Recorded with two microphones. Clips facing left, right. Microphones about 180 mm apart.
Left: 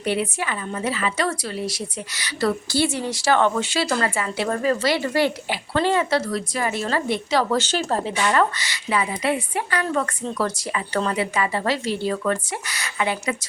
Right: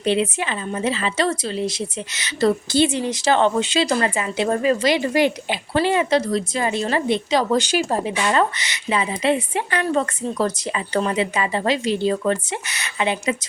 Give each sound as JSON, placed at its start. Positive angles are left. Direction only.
{"t": 0.0, "sound": "a woman's voice", "side_deg": -20}